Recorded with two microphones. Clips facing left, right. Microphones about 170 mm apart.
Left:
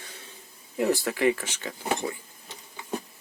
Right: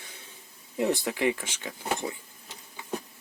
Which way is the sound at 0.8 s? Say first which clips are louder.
Left 2 dB; 20° right (ahead or behind).